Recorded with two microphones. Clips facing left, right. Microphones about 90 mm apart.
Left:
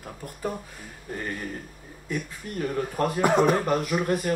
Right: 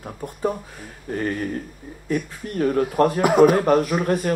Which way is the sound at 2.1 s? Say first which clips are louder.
Right 7 dB; 45° right (ahead or behind).